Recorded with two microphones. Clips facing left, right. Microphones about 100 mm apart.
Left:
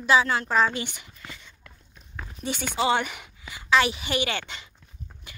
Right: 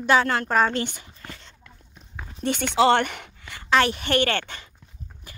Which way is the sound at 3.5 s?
50° right (ahead or behind).